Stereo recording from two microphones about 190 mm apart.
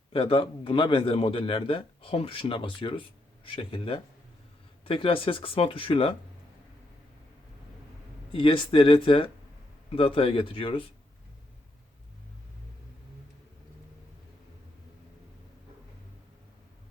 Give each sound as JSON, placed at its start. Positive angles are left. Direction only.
{"t": 0.1, "sound": "speech", "side_deg": 30}
{"t": 8.3, "sound": "speech", "side_deg": 25}